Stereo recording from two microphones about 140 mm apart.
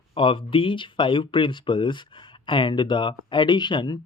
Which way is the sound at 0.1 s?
40° left (ahead or behind).